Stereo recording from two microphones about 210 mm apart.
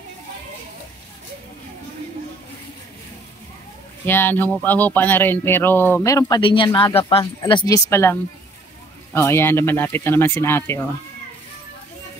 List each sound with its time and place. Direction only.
4.0 s speech: 10° left (ahead or behind)